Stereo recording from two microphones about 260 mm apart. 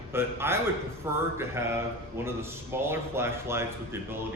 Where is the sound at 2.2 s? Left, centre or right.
Centre.